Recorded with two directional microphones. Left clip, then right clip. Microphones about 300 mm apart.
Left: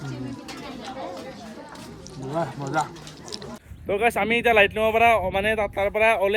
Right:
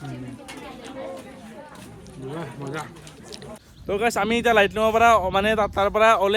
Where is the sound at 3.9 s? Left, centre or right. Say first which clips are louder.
Left 1 dB; centre.